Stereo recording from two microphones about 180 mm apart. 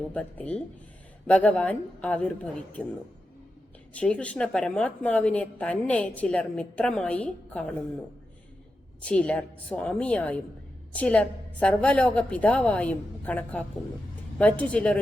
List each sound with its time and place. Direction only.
0.1 s a woman's voice: 5° left (ahead or behind)
3.9 s a woman's voice: 5° left (ahead or behind)
9.0 s a woman's voice: 5° left (ahead or behind)